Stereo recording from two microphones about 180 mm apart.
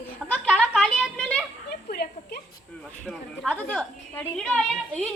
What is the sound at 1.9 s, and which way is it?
Speech, 60° left (ahead or behind).